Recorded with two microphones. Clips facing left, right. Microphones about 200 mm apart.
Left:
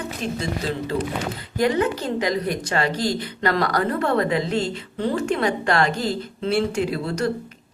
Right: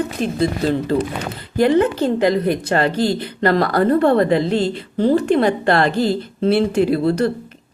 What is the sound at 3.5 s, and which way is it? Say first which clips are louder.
Speech: right 5 dB; 35° right (ahead or behind).